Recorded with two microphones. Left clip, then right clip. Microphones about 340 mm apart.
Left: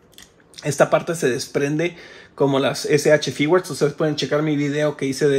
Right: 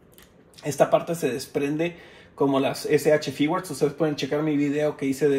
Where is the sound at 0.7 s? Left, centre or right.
Left.